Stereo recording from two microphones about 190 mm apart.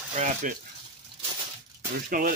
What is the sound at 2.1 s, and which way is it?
Speech, 45° right (ahead or behind).